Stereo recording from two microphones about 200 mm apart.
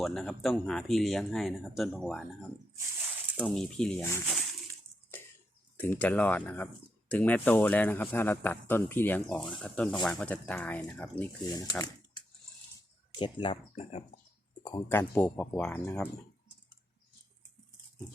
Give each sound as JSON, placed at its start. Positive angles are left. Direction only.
{"t": 0.0, "sound": "speech", "side_deg": 0}
{"t": 5.1, "sound": "a sound", "side_deg": 10}
{"t": 5.7, "sound": "speech", "side_deg": 10}
{"t": 11.4, "sound": "speech", "side_deg": 20}